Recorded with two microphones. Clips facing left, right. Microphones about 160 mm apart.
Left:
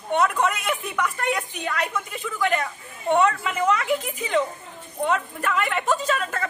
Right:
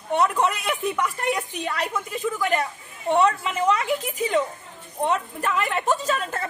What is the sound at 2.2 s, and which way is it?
Speech, 35° right (ahead or behind).